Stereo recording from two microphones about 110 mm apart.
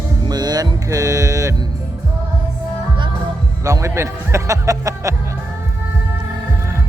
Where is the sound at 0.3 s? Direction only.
35° right (ahead or behind).